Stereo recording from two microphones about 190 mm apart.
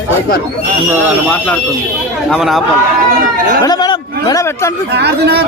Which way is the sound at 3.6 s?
20° left (ahead or behind).